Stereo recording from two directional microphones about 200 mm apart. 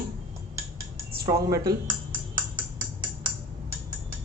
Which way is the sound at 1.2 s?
15° right (ahead or behind).